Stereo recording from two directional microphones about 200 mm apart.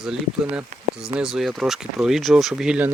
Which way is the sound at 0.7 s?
35° right (ahead or behind).